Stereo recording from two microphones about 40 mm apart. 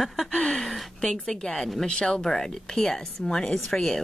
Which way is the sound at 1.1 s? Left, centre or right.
Centre.